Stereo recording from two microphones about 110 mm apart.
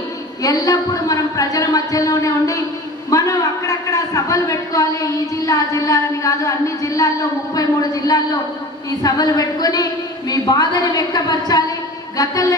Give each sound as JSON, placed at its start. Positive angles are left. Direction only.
{"t": 0.4, "sound": "a man's voice", "side_deg": 35}